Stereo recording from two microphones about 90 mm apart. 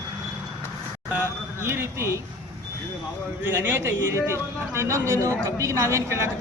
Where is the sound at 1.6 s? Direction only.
25° right (ahead or behind).